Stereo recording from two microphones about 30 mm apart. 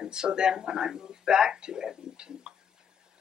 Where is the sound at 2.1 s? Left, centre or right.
Right.